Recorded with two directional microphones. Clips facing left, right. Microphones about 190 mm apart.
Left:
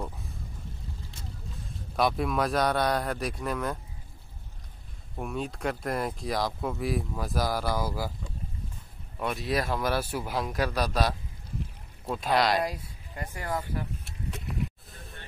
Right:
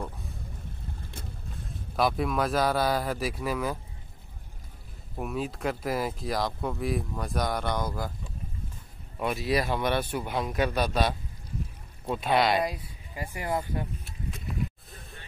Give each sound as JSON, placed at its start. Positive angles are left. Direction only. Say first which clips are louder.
{"t": 0.0, "sound": "a sound", "louder": "even", "side_deg": 0}
{"t": 1.0, "sound": "vehicle", "louder": "right 1 dB", "side_deg": -55}
{"t": 2.0, "sound": "speech", "louder": "even", "side_deg": 0}
{"t": 5.1, "sound": "speech", "louder": "right 1 dB", "side_deg": -5}
{"t": 9.2, "sound": "speech", "louder": "right 2 dB", "side_deg": 0}
{"t": 14.0, "sound": "a sound", "louder": "even", "side_deg": 70}